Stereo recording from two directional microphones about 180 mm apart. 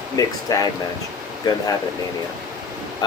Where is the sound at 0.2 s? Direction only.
20° left (ahead or behind).